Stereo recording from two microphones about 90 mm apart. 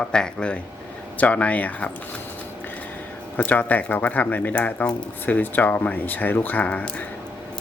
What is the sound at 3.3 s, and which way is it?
Speech, 20° left (ahead or behind).